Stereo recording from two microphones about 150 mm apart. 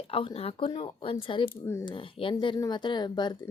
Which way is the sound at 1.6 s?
20° left (ahead or behind).